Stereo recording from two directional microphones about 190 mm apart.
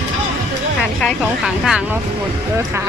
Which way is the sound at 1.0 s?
Centre (ahead or behind).